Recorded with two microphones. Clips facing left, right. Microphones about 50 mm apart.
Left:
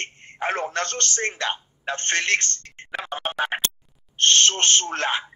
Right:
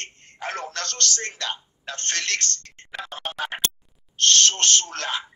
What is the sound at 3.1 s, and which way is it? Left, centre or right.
Music, left.